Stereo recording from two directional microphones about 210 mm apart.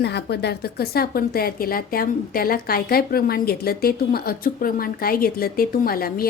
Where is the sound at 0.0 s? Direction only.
50° left (ahead or behind).